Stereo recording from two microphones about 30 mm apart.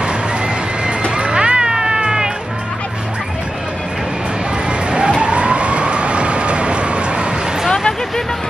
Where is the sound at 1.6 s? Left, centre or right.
Right.